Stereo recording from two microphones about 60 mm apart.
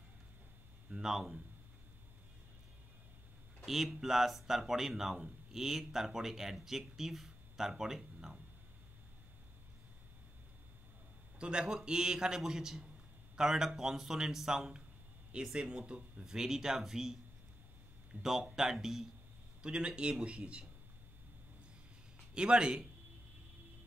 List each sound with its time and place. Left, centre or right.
0.8 s speech: centre
3.6 s speech: centre
11.3 s a man's voice: centre
18.2 s a man's voice: centre
19.6 s a man's voice: centre
22.3 s a man's voice: centre